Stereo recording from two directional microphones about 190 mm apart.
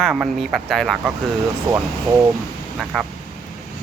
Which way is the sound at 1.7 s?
15° right (ahead or behind).